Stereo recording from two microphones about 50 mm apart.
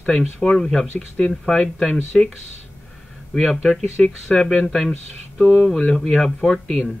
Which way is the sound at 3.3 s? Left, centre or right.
Centre.